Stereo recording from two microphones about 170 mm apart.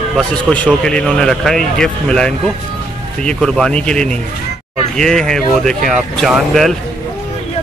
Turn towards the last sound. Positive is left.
turn(degrees=0)  # may be behind; listen again after turning